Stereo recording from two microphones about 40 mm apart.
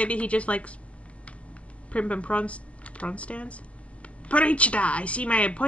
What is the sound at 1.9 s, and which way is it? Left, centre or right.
Speech, left.